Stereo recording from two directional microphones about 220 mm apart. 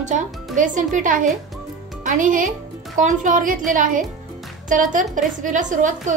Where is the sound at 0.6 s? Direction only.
35° right (ahead or behind).